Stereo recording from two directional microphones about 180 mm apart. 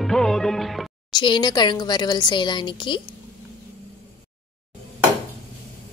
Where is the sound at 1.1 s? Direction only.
25° left (ahead or behind).